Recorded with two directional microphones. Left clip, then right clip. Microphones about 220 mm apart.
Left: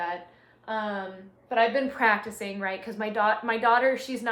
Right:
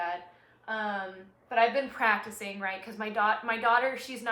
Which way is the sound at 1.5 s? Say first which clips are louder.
Left 2 dB; 15° left (ahead or behind).